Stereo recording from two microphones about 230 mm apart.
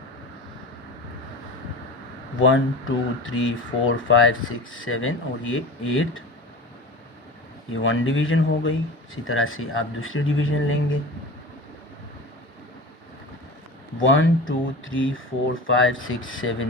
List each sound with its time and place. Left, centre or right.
2.4 s speech: left
7.7 s speech: left
14.0 s speech: left